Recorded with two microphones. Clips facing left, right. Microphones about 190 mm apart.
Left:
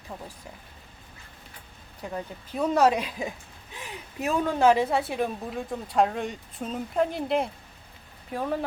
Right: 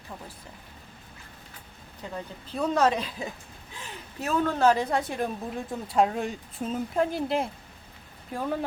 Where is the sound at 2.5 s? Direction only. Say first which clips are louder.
Left 2 dB; 10° left (ahead or behind).